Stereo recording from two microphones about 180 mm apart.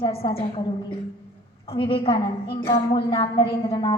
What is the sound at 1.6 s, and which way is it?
A woman's voice, 30° left (ahead or behind).